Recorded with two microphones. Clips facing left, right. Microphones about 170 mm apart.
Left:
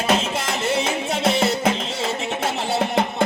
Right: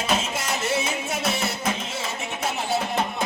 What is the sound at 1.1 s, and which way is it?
Music, 85° left.